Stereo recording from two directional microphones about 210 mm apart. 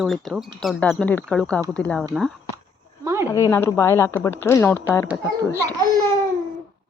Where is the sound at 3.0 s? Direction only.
15° right (ahead or behind).